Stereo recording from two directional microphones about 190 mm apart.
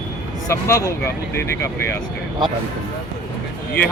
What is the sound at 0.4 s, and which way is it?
Speech, 15° left (ahead or behind).